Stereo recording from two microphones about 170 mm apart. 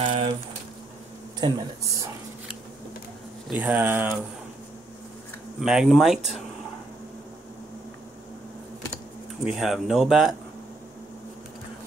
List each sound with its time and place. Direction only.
0.0 s a sound: 35° right (ahead or behind)
1.4 s speech: 25° right (ahead or behind)
3.4 s speech: 10° right (ahead or behind)
5.6 s speech: 5° right (ahead or behind)
9.4 s speech: centre (ahead or behind)